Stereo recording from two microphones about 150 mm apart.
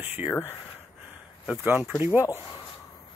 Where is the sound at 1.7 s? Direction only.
10° right (ahead or behind).